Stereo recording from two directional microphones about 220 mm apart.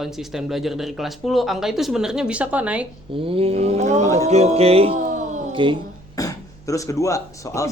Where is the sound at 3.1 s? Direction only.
25° right (ahead or behind).